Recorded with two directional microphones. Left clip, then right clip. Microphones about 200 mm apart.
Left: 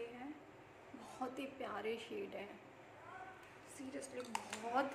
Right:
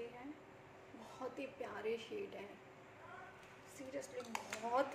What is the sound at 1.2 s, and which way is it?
A woman's voice, 20° left (ahead or behind).